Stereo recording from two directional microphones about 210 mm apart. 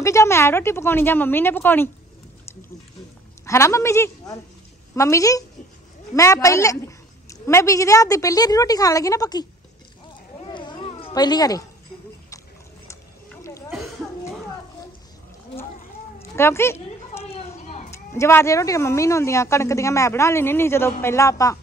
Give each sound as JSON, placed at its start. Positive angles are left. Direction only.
{"t": 0.0, "sound": "speech", "side_deg": 15}
{"t": 3.4, "sound": "speech", "side_deg": 15}
{"t": 10.4, "sound": "cat", "side_deg": 20}
{"t": 16.2, "sound": "a sound", "side_deg": 10}
{"t": 17.2, "sound": "a sound", "side_deg": 30}
{"t": 17.9, "sound": "speech", "side_deg": 15}